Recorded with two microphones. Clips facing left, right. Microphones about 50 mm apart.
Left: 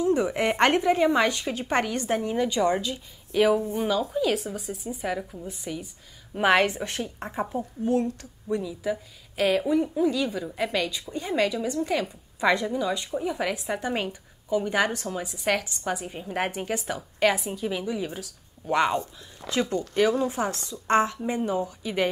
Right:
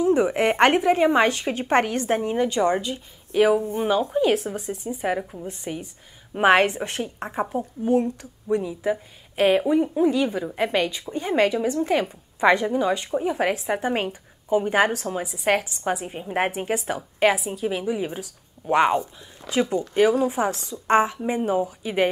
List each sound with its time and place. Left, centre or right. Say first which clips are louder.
0.0 s a woman's voice: right 4 dB; right
5.0 s a woman's voice: right 5 dB; right
6.3 s a woman's voice: right 4 dB; right